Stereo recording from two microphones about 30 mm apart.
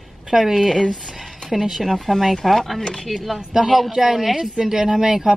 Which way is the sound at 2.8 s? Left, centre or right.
Left.